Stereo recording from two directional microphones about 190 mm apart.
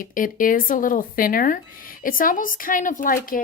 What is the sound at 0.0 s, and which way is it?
Speech, 45° left (ahead or behind).